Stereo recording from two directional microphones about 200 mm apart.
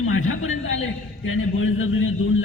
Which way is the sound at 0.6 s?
75° left (ahead or behind).